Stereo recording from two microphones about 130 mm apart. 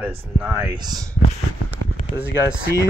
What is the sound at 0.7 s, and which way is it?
Speech, 30° right (ahead or behind).